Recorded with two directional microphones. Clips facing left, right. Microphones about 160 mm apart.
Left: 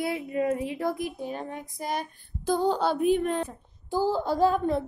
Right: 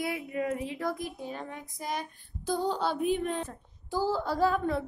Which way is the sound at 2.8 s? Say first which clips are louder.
Left 5 dB; 75° left (ahead or behind).